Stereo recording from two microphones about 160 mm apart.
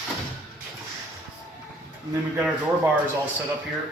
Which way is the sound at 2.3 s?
10° right (ahead or behind).